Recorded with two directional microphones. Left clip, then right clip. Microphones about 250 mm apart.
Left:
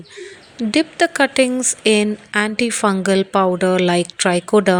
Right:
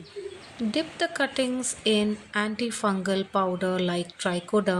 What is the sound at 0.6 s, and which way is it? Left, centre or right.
Speech, left.